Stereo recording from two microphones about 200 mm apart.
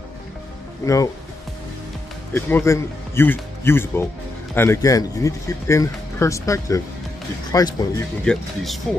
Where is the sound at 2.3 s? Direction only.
10° left (ahead or behind).